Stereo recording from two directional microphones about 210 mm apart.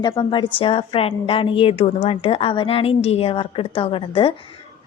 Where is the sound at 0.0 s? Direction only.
20° left (ahead or behind).